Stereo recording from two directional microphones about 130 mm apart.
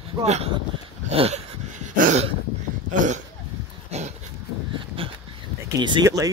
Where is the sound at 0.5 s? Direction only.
45° right (ahead or behind); by 2.2 s 80° right.